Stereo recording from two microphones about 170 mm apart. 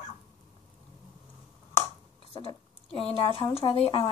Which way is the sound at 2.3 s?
35° left (ahead or behind).